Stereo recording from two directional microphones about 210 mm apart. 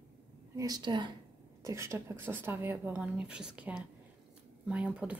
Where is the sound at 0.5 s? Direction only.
20° right (ahead or behind).